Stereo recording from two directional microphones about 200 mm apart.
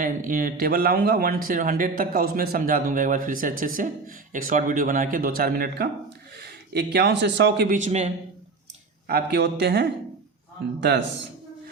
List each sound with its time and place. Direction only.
0.0 s speech: 40° right (ahead or behind)
7.9 s a man's voice: 35° right (ahead or behind)
9.0 s speech: 50° right (ahead or behind)